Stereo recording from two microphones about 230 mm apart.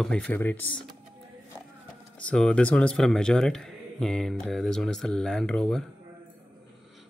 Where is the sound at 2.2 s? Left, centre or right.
Centre.